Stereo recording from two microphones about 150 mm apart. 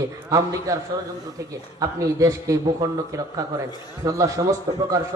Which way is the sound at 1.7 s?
25° right (ahead or behind).